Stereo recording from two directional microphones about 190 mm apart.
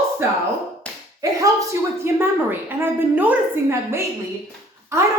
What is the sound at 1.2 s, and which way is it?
A woman's voice, 15° right (ahead or behind).